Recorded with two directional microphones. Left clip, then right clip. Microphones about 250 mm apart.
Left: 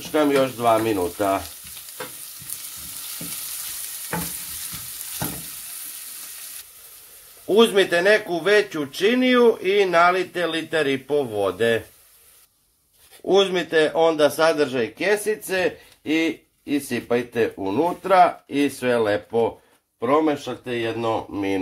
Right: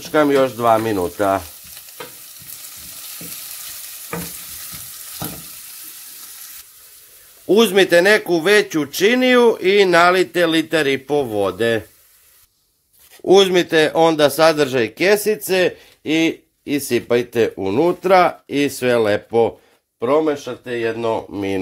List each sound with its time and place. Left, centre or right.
0.1 s speech: right
7.4 s speech: right
13.2 s speech: right